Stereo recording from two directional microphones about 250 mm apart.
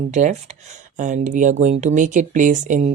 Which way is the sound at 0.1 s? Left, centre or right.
Right.